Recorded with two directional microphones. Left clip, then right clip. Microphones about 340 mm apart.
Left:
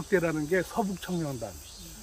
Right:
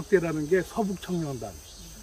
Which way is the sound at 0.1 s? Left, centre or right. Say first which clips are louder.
Right 3 dB; centre.